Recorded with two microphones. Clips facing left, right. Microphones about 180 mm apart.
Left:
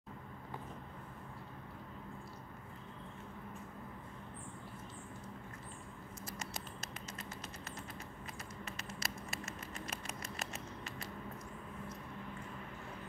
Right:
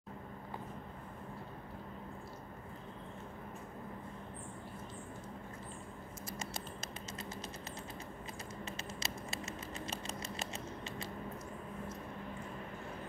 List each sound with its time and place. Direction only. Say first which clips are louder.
8.6 s patter: right 1 dB; 25° right (ahead or behind)